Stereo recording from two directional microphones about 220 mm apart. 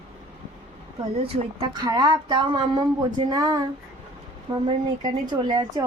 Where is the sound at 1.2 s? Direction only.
20° right (ahead or behind).